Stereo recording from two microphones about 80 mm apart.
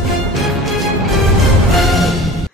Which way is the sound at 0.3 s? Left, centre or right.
Centre.